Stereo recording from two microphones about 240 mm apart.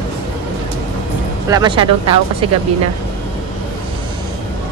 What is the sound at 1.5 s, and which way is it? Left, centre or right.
Speech, centre.